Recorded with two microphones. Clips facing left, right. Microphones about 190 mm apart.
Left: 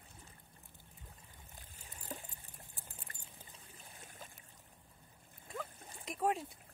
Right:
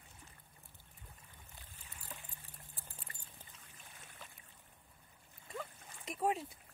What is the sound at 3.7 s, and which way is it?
Trickle, 35° left (ahead or behind).